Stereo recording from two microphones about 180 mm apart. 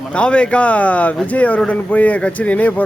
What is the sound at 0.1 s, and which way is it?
Speech, 5° left (ahead or behind).